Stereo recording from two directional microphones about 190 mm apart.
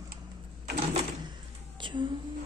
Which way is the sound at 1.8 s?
25° right (ahead or behind).